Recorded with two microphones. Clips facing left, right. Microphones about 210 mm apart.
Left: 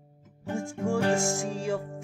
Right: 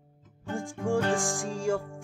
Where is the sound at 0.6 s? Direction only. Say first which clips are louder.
Even; 15° right (ahead or behind).